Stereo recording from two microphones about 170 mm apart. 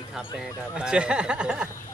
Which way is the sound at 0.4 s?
5° right (ahead or behind).